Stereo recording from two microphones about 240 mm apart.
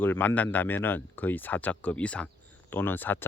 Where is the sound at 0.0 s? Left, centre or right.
Centre.